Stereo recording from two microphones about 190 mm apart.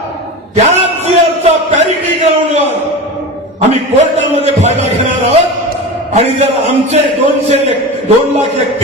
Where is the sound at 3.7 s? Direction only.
35° right (ahead or behind).